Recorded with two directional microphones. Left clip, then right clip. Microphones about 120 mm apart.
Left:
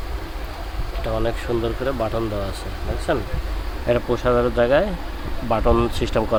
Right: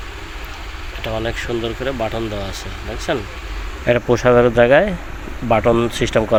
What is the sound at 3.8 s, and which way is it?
Speech, 35° right (ahead or behind).